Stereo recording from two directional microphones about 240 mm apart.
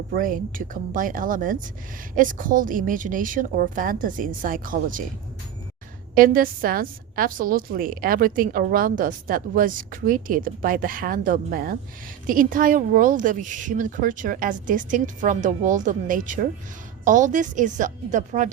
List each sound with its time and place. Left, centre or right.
0.1 s a woman's voice: right
6.1 s a woman's voice: right